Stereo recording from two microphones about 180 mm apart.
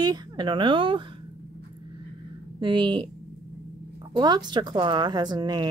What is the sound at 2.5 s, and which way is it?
Speech, 25° right (ahead or behind).